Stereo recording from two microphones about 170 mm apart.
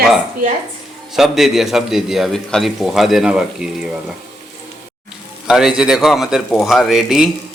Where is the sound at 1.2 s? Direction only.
Centre (ahead or behind).